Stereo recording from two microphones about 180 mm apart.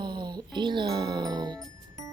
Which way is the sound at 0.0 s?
25° right (ahead or behind).